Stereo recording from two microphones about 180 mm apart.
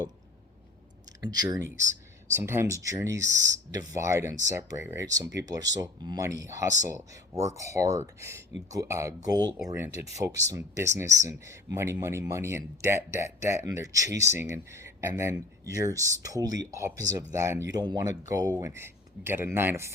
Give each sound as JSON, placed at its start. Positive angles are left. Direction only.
{"t": 1.3, "sound": "speech", "side_deg": -20}